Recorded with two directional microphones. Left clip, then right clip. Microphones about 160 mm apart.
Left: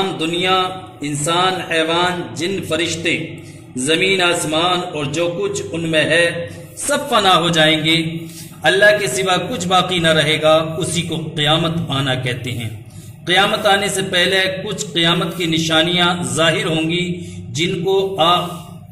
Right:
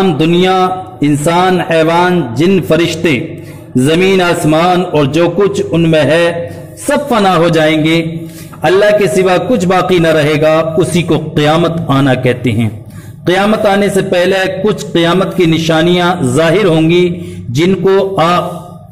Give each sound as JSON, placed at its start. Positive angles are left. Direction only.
{"t": 0.0, "sound": "a man's voice", "side_deg": -40}